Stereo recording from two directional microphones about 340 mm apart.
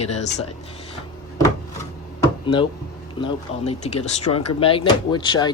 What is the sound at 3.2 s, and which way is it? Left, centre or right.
Speech, centre.